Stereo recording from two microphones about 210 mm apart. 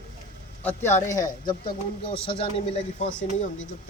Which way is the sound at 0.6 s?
10° left (ahead or behind).